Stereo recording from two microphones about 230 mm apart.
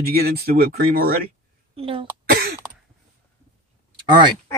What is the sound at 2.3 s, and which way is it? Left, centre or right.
Cough, right.